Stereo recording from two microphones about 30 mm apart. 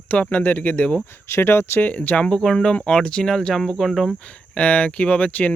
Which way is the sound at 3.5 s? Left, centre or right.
Centre.